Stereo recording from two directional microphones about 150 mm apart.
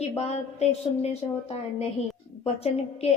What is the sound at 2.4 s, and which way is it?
Speech, 45° left (ahead or behind).